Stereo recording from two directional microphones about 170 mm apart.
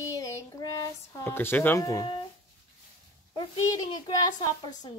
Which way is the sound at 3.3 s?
25° left (ahead or behind).